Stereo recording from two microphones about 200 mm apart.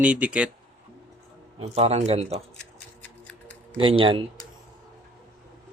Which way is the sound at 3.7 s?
25° right (ahead or behind).